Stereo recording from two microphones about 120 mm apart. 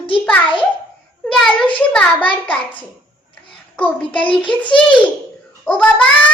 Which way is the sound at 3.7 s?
15° left (ahead or behind).